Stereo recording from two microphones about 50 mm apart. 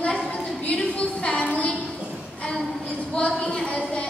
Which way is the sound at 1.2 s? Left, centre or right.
Left.